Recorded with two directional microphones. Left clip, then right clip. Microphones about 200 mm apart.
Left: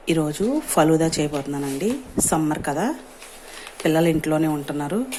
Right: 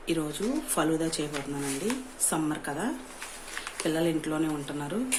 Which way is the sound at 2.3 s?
35° left (ahead or behind).